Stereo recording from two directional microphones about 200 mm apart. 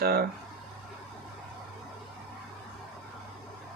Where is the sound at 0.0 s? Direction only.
50° right (ahead or behind).